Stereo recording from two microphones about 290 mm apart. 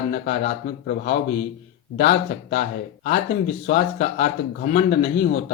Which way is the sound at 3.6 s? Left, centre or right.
Left.